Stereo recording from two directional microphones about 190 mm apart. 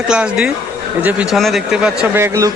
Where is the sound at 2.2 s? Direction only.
15° right (ahead or behind).